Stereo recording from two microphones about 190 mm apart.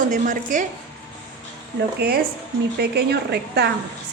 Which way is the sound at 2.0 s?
60° right (ahead or behind).